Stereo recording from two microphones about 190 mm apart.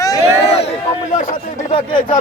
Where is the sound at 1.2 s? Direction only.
45° left (ahead or behind).